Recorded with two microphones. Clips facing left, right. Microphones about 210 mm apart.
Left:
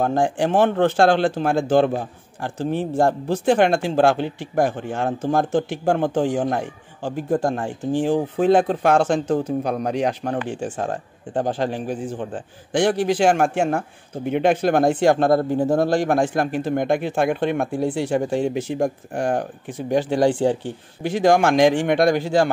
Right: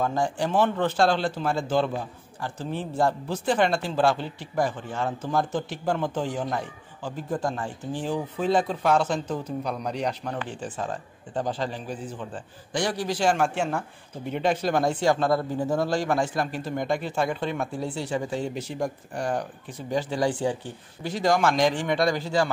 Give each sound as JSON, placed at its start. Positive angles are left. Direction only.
{"t": 0.0, "sound": "speech", "side_deg": 65}
{"t": 9.4, "sound": "speech", "side_deg": 50}